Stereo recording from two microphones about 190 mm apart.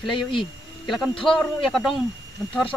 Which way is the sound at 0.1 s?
25° left (ahead or behind).